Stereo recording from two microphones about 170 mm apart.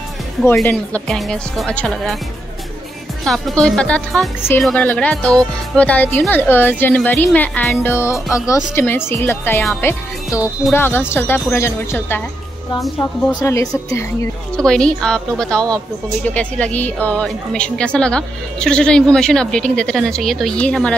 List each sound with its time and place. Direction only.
0.7 s a woman's voice: 5° left (ahead or behind)
3.3 s a woman's voice: 5° left (ahead or behind)
13.3 s a woman's voice: 20° left (ahead or behind)
14.6 s a woman's voice: 5° left (ahead or behind)